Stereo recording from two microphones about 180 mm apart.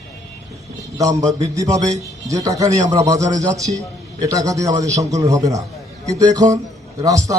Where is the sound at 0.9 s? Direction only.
20° right (ahead or behind).